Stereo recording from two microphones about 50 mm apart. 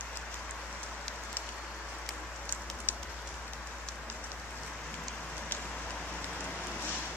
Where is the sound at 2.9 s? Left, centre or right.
Left.